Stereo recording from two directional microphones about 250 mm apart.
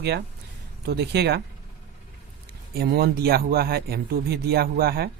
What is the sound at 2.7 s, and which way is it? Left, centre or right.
Speech, right.